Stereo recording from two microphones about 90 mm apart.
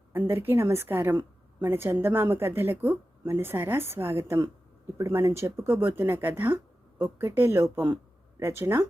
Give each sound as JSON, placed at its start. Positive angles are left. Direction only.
{"t": 0.1, "sound": "a woman's voice", "side_deg": -25}